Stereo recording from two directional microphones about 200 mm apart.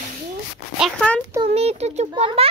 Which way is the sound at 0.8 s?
5° left (ahead or behind).